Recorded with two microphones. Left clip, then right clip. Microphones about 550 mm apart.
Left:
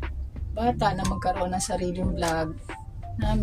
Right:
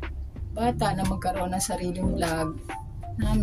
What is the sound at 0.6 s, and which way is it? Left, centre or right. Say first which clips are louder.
A woman's voice: left 1 dB; right.